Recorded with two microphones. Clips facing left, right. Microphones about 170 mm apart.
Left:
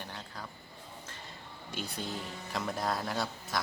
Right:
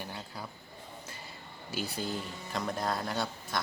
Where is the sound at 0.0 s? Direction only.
10° right (ahead or behind).